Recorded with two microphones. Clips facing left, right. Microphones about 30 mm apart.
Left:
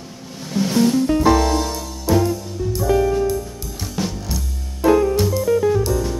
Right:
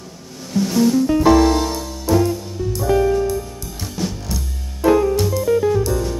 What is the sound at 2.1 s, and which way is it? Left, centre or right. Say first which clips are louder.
Music: right 1 dB; centre.